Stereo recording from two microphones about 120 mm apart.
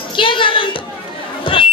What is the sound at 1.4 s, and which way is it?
Chatter, 45° left (ahead or behind).